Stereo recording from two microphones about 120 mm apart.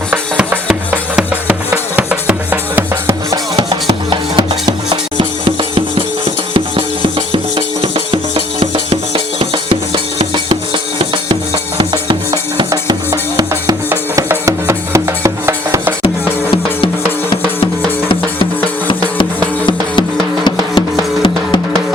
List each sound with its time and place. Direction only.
0.1 s music: 10° right (ahead or behind)
3.8 s music: 40° right (ahead or behind); by 15.9 s 25° right (ahead or behind)
16.0 s music: 50° left (ahead or behind)
19.6 s music: 40° left (ahead or behind)